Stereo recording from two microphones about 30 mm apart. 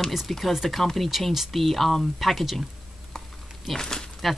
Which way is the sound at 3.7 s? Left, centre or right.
Centre.